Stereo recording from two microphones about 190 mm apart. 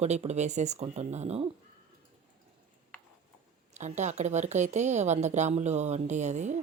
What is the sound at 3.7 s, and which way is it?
A woman's voice, 40° right (ahead or behind).